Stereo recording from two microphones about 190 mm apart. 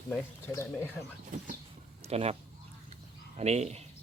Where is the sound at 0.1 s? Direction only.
15° left (ahead or behind).